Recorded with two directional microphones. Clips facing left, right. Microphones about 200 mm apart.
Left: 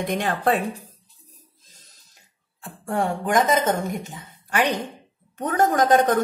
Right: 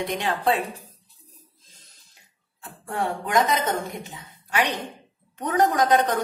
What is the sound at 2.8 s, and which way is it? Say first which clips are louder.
A woman's voice: left 3 dB; 45° left (ahead or behind).